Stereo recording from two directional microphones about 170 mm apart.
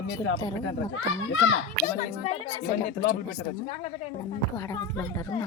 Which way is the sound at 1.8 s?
45° left (ahead or behind).